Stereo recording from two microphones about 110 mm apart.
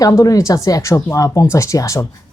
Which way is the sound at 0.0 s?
35° left (ahead or behind).